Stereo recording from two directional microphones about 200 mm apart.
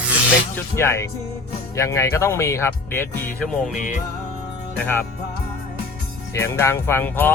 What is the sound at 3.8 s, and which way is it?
Music, 35° left (ahead or behind).